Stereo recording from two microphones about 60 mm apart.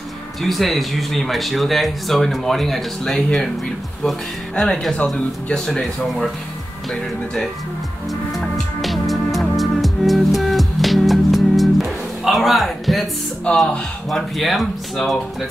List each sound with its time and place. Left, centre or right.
0.4 s speech: centre
4.6 s speech: centre
8.1 s music: centre
13.5 s speech: centre
14.1 s speech: centre